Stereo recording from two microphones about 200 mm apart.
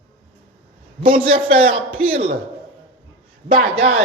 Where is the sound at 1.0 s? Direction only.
25° right (ahead or behind).